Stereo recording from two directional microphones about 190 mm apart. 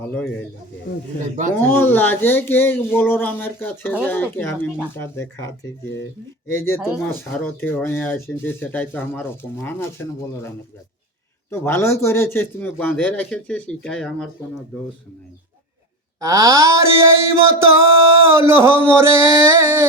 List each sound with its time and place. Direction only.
1.5 s speech: 10° left (ahead or behind)
6.5 s speech: 15° left (ahead or behind)
11.6 s speech: 15° left (ahead or behind)
16.2 s a sound: 15° right (ahead or behind)